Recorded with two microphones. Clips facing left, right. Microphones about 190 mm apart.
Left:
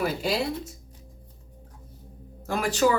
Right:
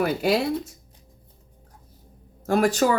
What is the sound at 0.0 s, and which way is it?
Speech, 60° right (ahead or behind).